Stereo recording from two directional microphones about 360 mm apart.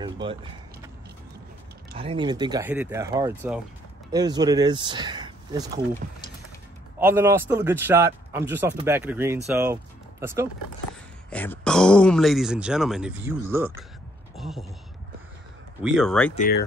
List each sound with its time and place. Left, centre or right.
0.0 s a man's voice: centre
2.0 s a man's voice: centre
7.0 s a man's voice: centre
11.2 s speech: centre
15.8 s speech: centre
16.3 s speech: left